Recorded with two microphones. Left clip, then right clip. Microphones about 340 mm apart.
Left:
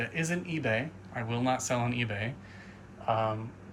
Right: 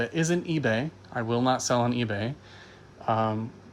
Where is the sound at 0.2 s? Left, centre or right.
Centre.